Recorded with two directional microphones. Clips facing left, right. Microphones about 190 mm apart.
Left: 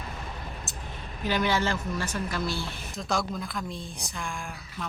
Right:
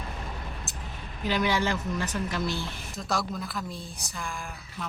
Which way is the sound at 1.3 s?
15° right (ahead or behind).